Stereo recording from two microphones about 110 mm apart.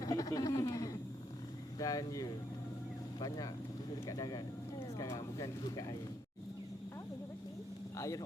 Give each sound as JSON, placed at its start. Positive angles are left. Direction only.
{"t": 0.0, "sound": "a sound", "side_deg": 35}
{"t": 1.8, "sound": "speech", "side_deg": 35}
{"t": 7.9, "sound": "speech", "side_deg": 30}